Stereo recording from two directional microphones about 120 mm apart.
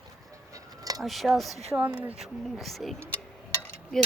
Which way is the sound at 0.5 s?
30° right (ahead or behind).